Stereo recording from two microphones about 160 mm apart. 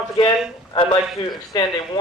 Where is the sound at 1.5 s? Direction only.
25° left (ahead or behind).